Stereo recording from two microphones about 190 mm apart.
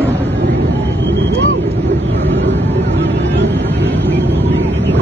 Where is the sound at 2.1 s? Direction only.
65° right (ahead or behind).